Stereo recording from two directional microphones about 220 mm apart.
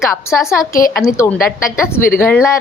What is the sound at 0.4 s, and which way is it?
Speech, 15° left (ahead or behind).